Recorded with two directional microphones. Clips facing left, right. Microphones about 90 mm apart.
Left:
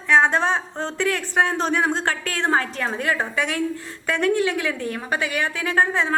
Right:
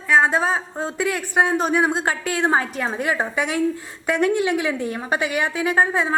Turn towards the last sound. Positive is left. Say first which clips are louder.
# right 1 dB
turn(degrees=-10)  # may be behind; listen again after turning